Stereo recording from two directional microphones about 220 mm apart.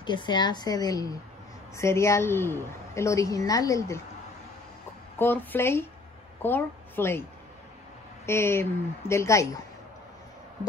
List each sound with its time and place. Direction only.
0.0 s a woman's voice: 20° left (ahead or behind)
5.2 s a woman's voice: 10° left (ahead or behind)
8.3 s a woman's voice: 10° left (ahead or behind)